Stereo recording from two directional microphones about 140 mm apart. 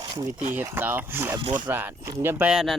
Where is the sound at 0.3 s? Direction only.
15° right (ahead or behind).